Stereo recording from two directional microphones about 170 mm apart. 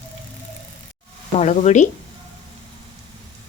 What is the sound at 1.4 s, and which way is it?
Speech, 45° left (ahead or behind).